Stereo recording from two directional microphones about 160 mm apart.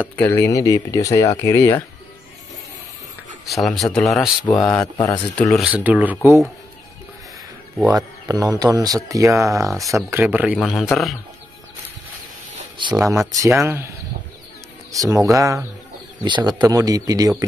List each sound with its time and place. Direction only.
0.0 s speech: 10° left (ahead or behind)
3.4 s speech: centre (ahead or behind)
4.6 s speech: 25° left (ahead or behind)
5.5 s speech: 5° right (ahead or behind)
7.9 s speech: 25° right (ahead or behind)
9.7 s speech: centre (ahead or behind)
12.7 s speech: 30° right (ahead or behind)
13.3 s speech: 20° right (ahead or behind)
14.9 s speech: 20° right (ahead or behind)